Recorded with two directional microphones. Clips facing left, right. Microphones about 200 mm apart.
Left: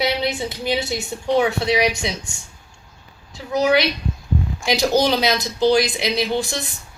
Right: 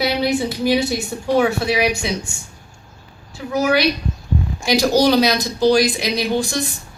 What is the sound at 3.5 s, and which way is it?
A woman's voice, 20° left (ahead or behind).